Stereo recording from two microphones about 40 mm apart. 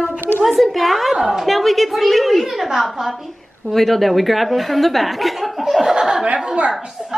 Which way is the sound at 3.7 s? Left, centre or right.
Centre.